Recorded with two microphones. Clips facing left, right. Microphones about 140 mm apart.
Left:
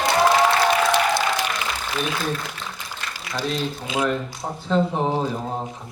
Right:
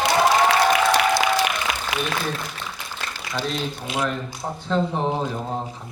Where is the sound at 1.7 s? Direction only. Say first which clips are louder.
Right 2 dB; 90° right.